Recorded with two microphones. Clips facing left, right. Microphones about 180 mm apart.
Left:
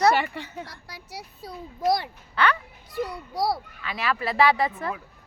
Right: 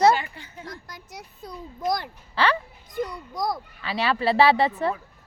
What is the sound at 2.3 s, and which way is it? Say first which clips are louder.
Speech: right 1 dB; 30° right (ahead or behind).